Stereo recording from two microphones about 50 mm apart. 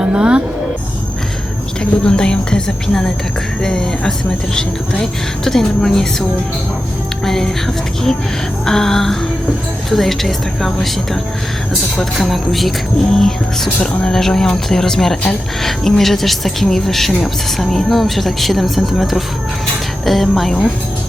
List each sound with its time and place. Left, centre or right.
0.0 s speech: centre
1.8 s speech: centre
7.3 s speech: centre
8.6 s speech: centre